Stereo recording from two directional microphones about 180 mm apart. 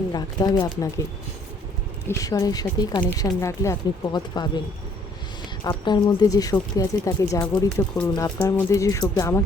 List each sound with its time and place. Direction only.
0.1 s speech: 20° left (ahead or behind)
2.0 s speech: 20° left (ahead or behind)
5.6 s speech: 25° left (ahead or behind)